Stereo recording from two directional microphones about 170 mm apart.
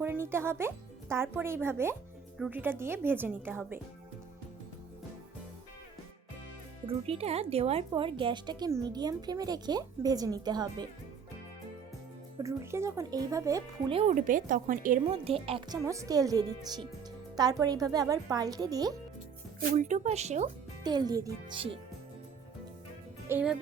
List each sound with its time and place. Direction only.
0.0 s a woman's voice: 15° right (ahead or behind)
6.8 s speech: 35° right (ahead or behind)
12.4 s speech: 15° right (ahead or behind)
13.9 s speech: 40° right (ahead or behind)
15.1 s a woman's voice: 35° right (ahead or behind)
15.9 s speech: 20° right (ahead or behind)
19.7 s speech: 45° right (ahead or behind)
20.8 s speech: 25° right (ahead or behind)
23.3 s speech: 5° right (ahead or behind)